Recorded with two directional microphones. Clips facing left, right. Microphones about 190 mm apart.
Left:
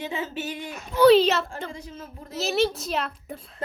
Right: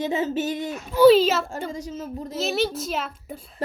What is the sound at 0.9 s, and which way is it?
Speech, 5° right (ahead or behind).